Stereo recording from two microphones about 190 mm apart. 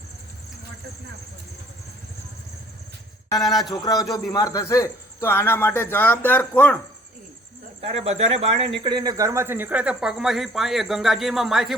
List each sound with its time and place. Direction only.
3.2 s a man's voice: 20° left (ahead or behind)
7.8 s speech: 35° right (ahead or behind)
8.8 s speech: 20° right (ahead or behind); by 11.7 s centre (ahead or behind)